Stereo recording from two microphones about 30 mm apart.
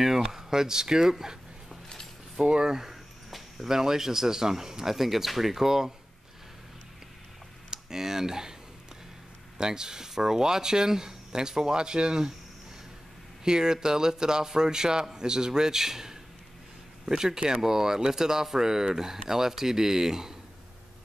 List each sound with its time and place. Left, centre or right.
0.0 s speech: centre
2.4 s speech: right
3.3 s a sound: centre
3.6 s speech: centre
7.7 s speech: centre
9.6 s speech: right
13.4 s speech: right